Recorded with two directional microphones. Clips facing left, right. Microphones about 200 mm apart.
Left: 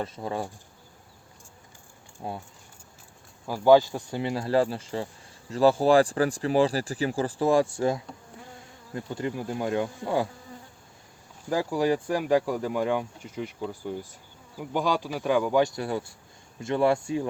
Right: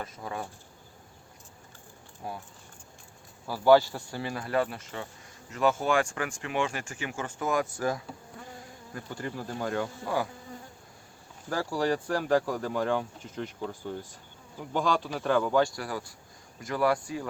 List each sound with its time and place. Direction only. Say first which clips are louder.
0.0 s speech: left 6 dB; 30° left (ahead or behind)
2.2 s speech: left 3 dB; 25° left (ahead or behind)
3.4 s speech: left 2 dB; 15° left (ahead or behind)
11.4 s speech: left 4 dB; 15° left (ahead or behind)